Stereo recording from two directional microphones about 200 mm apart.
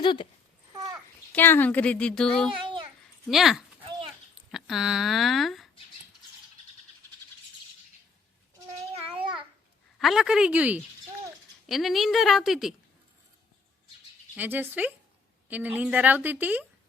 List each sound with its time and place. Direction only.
0.0 s speech: 25° left (ahead or behind)
1.3 s a woman's voice: 10° left (ahead or behind)
9.1 s babbling: 25° right (ahead or behind)
10.0 s a woman's voice: centre (ahead or behind)
14.3 s a woman's voice: 10° right (ahead or behind)